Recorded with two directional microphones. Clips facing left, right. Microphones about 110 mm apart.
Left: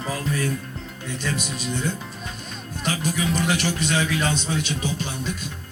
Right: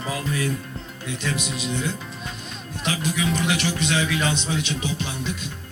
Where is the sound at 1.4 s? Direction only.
40° left (ahead or behind).